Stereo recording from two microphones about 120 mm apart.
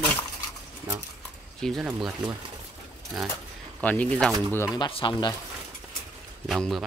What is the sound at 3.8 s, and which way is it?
Speech, 10° left (ahead or behind).